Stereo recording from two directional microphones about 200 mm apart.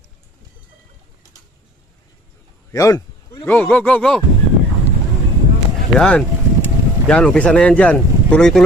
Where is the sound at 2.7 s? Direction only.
15° left (ahead or behind).